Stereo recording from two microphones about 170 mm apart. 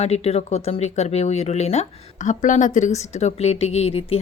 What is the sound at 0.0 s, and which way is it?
A woman's voice, 40° left (ahead or behind).